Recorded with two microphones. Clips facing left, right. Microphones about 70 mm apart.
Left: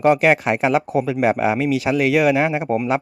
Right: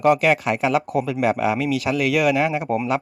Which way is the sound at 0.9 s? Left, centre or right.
Left.